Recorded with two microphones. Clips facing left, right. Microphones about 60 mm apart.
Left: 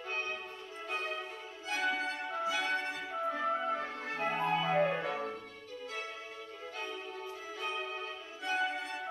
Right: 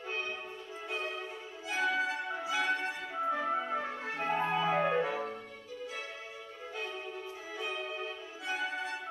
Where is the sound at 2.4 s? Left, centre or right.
Centre.